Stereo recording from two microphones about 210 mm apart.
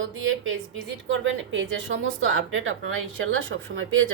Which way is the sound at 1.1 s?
60° right (ahead or behind).